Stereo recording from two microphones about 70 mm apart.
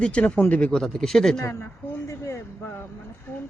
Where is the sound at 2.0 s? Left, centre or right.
Left.